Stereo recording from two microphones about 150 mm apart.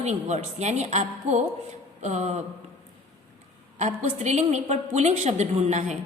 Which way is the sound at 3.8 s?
50° right (ahead or behind).